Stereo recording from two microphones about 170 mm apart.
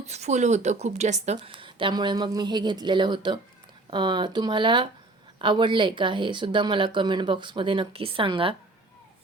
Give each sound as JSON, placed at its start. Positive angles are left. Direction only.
{"t": 0.0, "sound": "a woman's voice", "side_deg": -40}
{"t": 1.4, "sound": "speech", "side_deg": -30}